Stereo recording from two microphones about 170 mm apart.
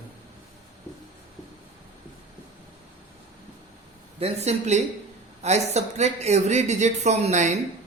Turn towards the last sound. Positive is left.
turn(degrees=-45)  # may be behind; listen again after turning